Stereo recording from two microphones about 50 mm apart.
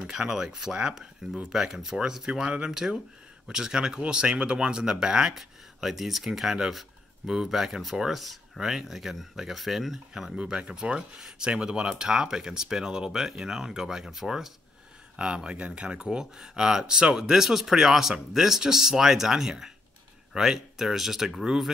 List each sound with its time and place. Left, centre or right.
0.0 s speech: centre
10.3 s speech: centre
15.1 s speech: centre